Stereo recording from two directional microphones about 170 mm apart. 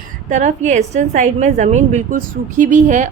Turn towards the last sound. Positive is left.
turn(degrees=-45)  # may be behind; listen again after turning